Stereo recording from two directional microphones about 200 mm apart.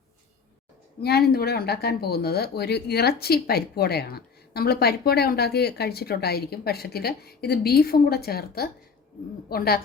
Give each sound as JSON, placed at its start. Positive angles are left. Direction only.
{"t": 1.0, "sound": "speech", "side_deg": 50}